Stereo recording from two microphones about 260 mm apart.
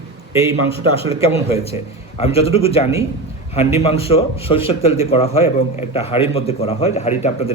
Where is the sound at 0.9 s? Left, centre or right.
Left.